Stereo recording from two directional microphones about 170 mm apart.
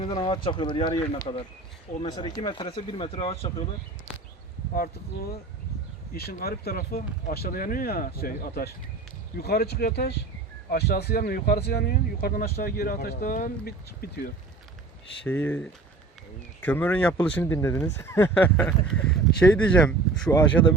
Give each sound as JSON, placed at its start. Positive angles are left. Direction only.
{"t": 0.0, "sound": "speech", "side_deg": 30}
{"t": 4.7, "sound": "speech", "side_deg": 60}
{"t": 15.2, "sound": "speech", "side_deg": 10}